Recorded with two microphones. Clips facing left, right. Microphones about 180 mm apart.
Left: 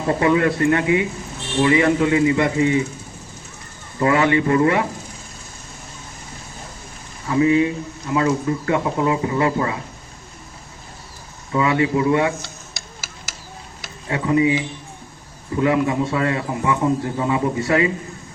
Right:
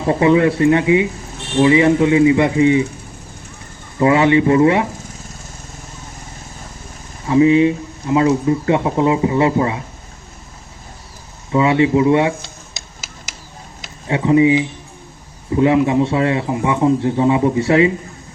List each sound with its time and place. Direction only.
0.1 s speech: 20° right (ahead or behind)
4.0 s speech: 20° right (ahead or behind)
7.3 s speech: 20° right (ahead or behind)
11.5 s speech: 25° right (ahead or behind)
12.7 s tick-tock: 20° right (ahead or behind)
13.8 s speech: 20° right (ahead or behind)